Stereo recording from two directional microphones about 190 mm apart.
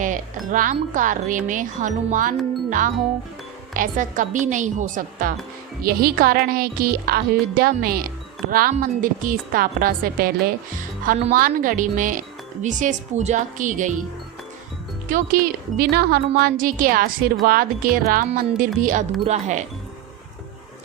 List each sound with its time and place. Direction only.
0.0 s speech: 45° right (ahead or behind)
15.8 s speech: 55° right (ahead or behind); by 19.6 s 35° right (ahead or behind)